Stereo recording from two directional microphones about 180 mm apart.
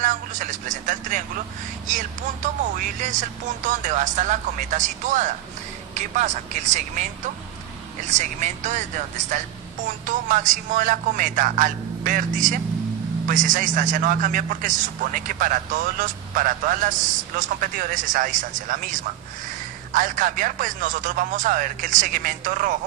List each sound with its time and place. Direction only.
0.0 s a man's voice: 45° right (ahead or behind)
8.1 s speech: 40° right (ahead or behind)